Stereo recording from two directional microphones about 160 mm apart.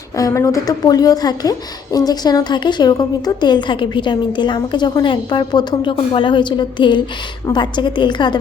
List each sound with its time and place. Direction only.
0.2 s a woman's voice: 20° left (ahead or behind)